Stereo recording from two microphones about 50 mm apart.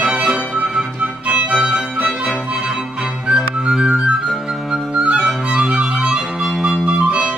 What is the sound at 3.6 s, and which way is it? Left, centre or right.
Music, centre.